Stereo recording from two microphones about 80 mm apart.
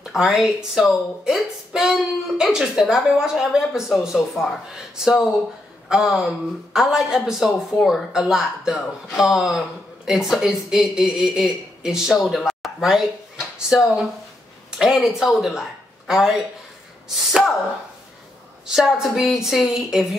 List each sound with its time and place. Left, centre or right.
0.0 s speech: centre
18.7 s speech: centre